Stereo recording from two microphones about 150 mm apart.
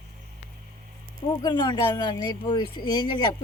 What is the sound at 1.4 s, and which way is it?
Speech, 30° left (ahead or behind).